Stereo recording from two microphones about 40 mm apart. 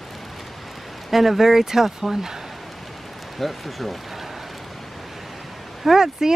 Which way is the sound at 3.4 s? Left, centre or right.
Centre.